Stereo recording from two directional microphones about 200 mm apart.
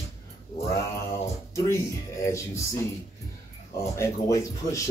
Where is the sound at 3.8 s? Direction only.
15° left (ahead or behind).